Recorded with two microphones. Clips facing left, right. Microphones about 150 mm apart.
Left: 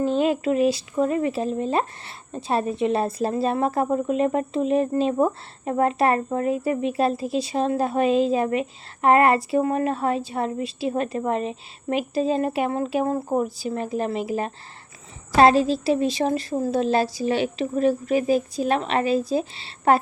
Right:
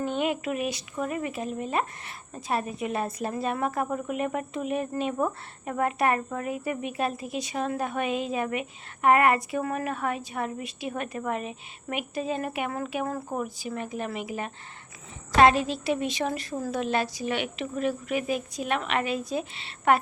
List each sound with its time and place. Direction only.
0.0 s speech: 35° left (ahead or behind)